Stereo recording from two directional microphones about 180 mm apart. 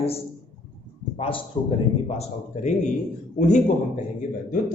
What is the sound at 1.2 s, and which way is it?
A man's voice, 30° left (ahead or behind).